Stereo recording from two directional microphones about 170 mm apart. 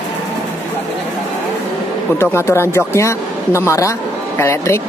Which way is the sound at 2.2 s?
15° left (ahead or behind).